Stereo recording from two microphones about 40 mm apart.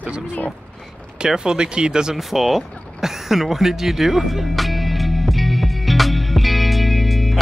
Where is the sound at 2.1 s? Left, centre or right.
Centre.